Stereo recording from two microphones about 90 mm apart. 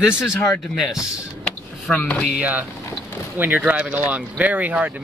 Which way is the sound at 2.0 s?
15° left (ahead or behind).